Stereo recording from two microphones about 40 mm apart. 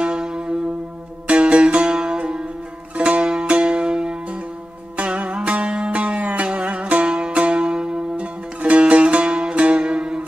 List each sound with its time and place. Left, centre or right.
0.0 s music: centre
4.9 s music: right
8.2 s music: right